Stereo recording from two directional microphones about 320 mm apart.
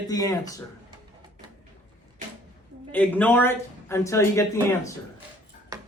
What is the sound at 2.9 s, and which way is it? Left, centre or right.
Speech, centre.